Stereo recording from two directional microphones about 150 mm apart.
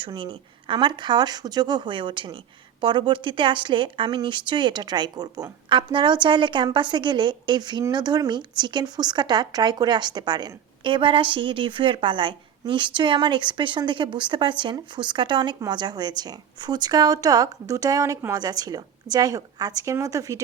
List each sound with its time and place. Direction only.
0.0 s speech: 30° right (ahead or behind)